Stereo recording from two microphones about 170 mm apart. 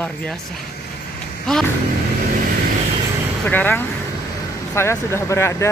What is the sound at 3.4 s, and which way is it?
Speech, 10° left (ahead or behind).